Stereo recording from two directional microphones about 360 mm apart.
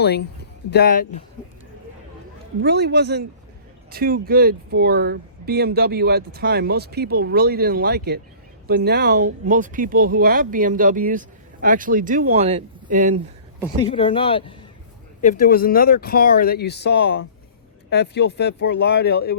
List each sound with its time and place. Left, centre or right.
0.0 s speech: left
2.6 s speech: right
13.6 s speech: centre